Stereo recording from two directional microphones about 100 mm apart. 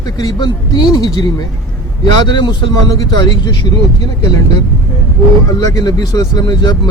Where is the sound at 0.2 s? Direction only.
45° left (ahead or behind).